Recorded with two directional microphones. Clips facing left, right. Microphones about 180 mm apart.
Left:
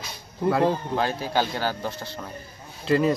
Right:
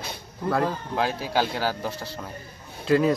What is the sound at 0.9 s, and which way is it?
Speech, 5° right (ahead or behind).